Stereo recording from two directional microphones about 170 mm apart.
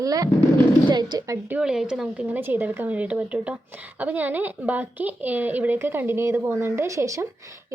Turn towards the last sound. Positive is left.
turn(degrees=-20)  # may be behind; listen again after turning